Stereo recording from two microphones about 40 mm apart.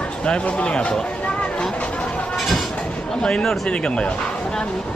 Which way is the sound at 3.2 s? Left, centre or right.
Centre.